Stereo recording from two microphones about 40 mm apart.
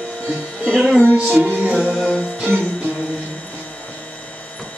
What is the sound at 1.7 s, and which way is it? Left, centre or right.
Music, right.